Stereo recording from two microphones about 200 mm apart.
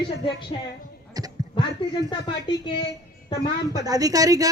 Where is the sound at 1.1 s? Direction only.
20° right (ahead or behind).